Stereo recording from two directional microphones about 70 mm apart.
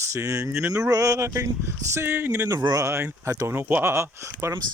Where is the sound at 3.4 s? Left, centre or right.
Right.